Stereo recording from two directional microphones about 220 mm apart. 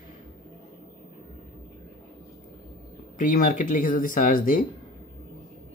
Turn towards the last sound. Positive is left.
turn(degrees=40)  # may be behind; listen again after turning